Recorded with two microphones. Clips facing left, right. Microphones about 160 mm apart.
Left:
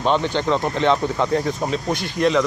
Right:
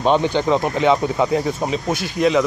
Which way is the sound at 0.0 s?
15° right (ahead or behind).